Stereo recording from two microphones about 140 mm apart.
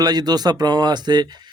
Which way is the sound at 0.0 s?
30° right (ahead or behind).